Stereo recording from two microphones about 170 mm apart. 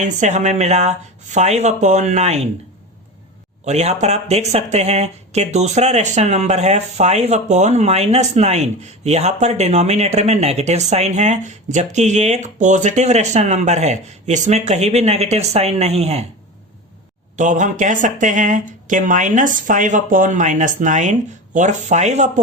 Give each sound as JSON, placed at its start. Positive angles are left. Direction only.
{"t": 0.0, "sound": "speech", "side_deg": -45}
{"t": 3.7, "sound": "speech", "side_deg": -40}
{"t": 17.3, "sound": "speech", "side_deg": -45}